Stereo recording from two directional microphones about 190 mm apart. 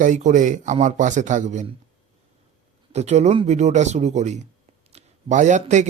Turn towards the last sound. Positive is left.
turn(degrees=-40)  # may be behind; listen again after turning